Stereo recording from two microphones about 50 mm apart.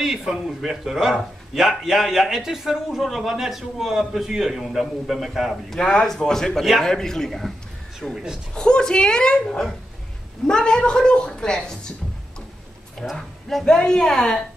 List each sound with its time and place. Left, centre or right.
0.0 s a man's voice: centre
5.8 s a woman's voice: centre
8.1 s a man's voice: centre
8.5 s a woman's voice: centre
13.1 s a woman's voice: centre